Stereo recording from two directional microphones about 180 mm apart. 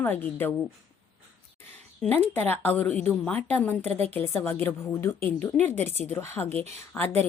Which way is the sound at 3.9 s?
35° right (ahead or behind).